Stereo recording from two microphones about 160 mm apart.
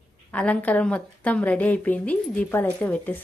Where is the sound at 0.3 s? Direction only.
10° left (ahead or behind).